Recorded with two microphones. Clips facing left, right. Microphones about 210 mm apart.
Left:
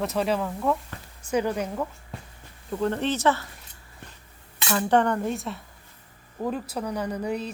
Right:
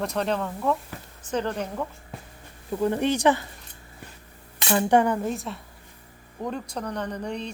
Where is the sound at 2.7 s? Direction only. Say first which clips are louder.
Right 2 dB; 10° right (ahead or behind).